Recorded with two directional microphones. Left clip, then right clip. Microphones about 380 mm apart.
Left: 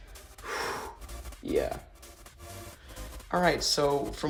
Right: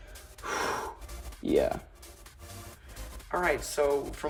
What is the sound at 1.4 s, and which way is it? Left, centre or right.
Music, right.